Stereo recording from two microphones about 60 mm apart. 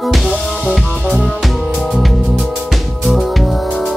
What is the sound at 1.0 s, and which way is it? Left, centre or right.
Music, centre.